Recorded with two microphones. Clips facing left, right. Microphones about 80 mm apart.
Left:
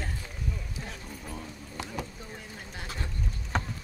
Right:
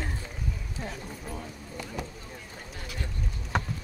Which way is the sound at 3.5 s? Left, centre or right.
Centre.